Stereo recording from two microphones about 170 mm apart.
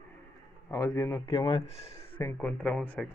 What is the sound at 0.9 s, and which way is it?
Speech, 15° left (ahead or behind).